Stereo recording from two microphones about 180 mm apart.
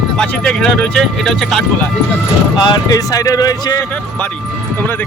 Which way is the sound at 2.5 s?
20° left (ahead or behind).